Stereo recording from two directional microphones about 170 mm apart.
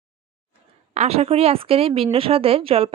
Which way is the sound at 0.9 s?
40° right (ahead or behind).